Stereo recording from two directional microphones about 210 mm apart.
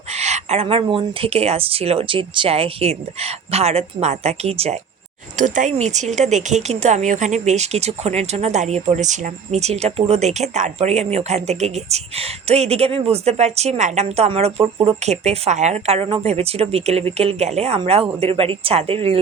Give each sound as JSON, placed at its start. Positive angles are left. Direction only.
{"t": 0.1, "sound": "speech", "side_deg": -30}